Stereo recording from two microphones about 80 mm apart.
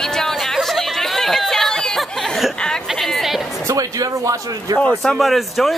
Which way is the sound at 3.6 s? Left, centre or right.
Right.